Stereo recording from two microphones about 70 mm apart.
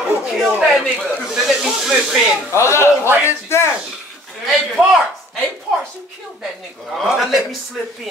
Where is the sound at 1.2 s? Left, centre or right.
Centre.